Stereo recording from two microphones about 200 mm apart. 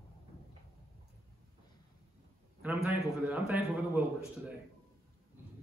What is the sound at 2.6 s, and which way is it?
A man's voice, 10° right (ahead or behind).